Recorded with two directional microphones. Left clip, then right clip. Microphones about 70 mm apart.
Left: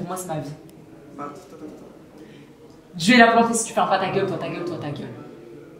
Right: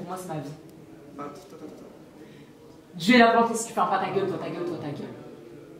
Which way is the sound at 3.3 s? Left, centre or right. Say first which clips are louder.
Left 4 dB; centre.